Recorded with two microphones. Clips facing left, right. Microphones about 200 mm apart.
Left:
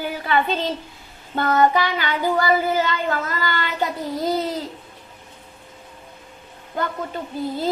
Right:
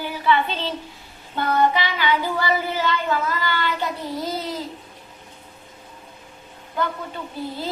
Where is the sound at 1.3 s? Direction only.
50° left (ahead or behind).